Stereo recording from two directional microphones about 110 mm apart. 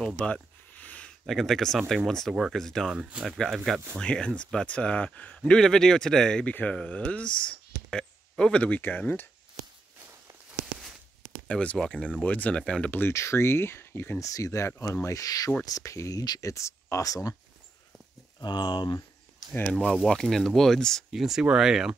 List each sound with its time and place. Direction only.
0.0 s a sound: 10° left (ahead or behind)
2.0 s speech: 5° left (ahead or behind)
3.0 s speech: 10° right (ahead or behind)
3.3 s speech: centre (ahead or behind)
11.4 s speech: 10° left (ahead or behind)
13.1 s speech: 25° left (ahead or behind)
18.4 s speech: 40° left (ahead or behind)
19.8 s speech: centre (ahead or behind)